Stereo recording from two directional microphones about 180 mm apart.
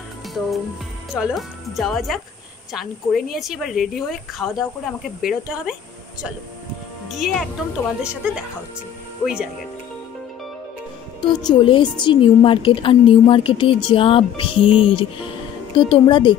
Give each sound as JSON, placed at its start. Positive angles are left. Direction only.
{"t": 1.1, "sound": "speech", "side_deg": -5}
{"t": 7.1, "sound": "speech", "side_deg": 0}
{"t": 11.1, "sound": "a woman's voice", "side_deg": 25}